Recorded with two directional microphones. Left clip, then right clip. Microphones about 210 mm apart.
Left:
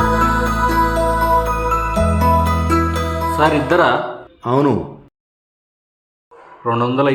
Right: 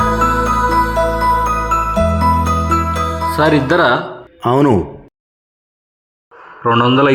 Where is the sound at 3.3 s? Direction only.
25° right (ahead or behind).